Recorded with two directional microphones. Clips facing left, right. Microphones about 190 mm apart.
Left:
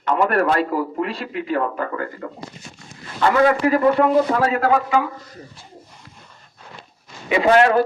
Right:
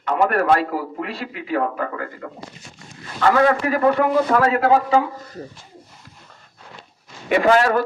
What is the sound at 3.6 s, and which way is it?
Speech, 25° left (ahead or behind).